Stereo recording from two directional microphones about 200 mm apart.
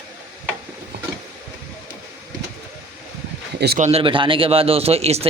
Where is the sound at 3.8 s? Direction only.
30° right (ahead or behind).